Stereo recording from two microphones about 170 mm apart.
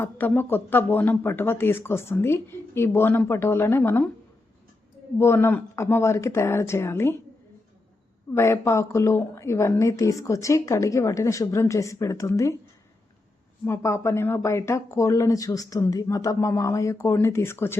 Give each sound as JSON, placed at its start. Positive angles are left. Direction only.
{"t": 0.0, "sound": "a woman's voice", "side_deg": 10}
{"t": 5.2, "sound": "a woman's voice", "side_deg": 15}
{"t": 8.3, "sound": "a woman's voice", "side_deg": 15}
{"t": 13.7, "sound": "a woman's voice", "side_deg": 15}